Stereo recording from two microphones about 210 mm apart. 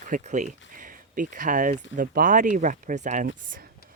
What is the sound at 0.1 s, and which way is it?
Speech, 35° right (ahead or behind).